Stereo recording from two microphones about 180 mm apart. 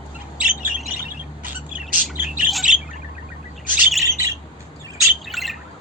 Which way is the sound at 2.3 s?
Centre (ahead or behind).